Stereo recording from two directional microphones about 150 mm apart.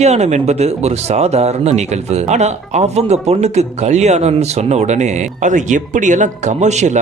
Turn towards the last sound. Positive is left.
turn(degrees=-50)  # may be behind; listen again after turning